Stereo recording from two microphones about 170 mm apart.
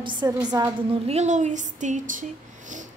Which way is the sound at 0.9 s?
40° right (ahead or behind).